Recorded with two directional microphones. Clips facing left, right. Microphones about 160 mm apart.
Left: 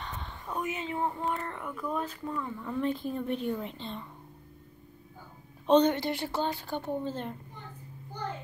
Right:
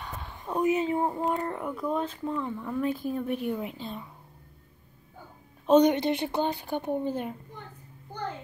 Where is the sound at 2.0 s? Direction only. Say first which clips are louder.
Right 4 dB; 20° right (ahead or behind).